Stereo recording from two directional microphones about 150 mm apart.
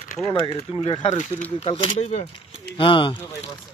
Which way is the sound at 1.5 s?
35° left (ahead or behind).